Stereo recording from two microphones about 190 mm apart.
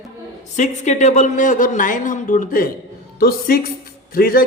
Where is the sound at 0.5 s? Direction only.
40° left (ahead or behind).